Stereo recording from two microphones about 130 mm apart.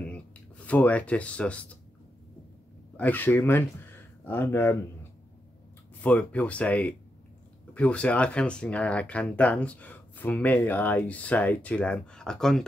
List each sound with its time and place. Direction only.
0.1 s speech: 10° left (ahead or behind)
3.0 s speech: 15° left (ahead or behind)
5.9 s speech: 10° left (ahead or behind)